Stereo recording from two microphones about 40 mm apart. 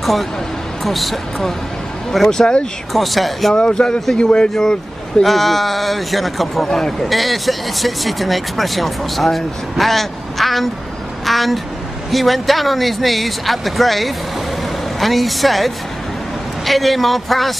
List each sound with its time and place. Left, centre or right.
0.0 s speech: centre
2.2 s speech: centre
2.9 s speech: centre
3.5 s speech: centre
5.2 s speech: centre
6.7 s speech: centre
7.1 s speech: centre